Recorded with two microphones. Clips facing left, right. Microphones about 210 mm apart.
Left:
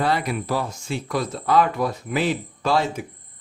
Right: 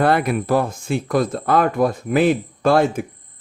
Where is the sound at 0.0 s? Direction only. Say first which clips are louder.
Right 6 dB; 55° right (ahead or behind).